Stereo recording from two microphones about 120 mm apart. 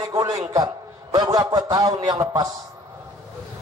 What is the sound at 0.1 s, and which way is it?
A man's voice, 25° right (ahead or behind).